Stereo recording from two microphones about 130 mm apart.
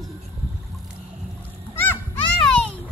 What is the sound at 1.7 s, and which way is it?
Goose, 15° left (ahead or behind).